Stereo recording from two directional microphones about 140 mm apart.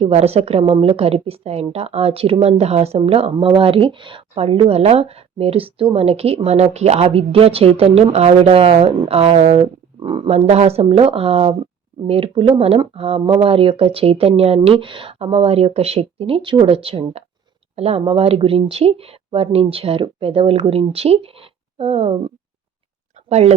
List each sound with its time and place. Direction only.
0.0 s speech: 45° right (ahead or behind)
10.2 s speech: 50° right (ahead or behind)
23.3 s speech: 50° right (ahead or behind)